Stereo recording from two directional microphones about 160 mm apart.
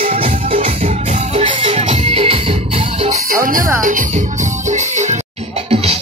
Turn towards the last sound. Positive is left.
turn(degrees=-50)  # may be behind; listen again after turning